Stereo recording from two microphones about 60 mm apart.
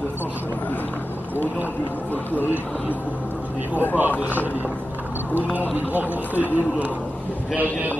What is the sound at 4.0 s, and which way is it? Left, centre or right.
Speech, right.